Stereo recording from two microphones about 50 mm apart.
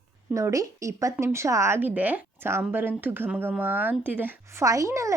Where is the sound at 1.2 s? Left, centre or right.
Right.